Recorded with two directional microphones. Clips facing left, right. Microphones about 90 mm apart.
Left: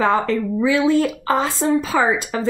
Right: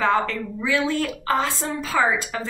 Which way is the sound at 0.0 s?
20° left (ahead or behind).